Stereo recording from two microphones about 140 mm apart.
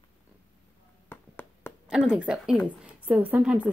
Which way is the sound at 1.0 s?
15° left (ahead or behind).